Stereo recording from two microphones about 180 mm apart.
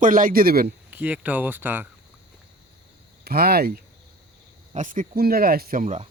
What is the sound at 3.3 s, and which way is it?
Speech, 60° right (ahead or behind).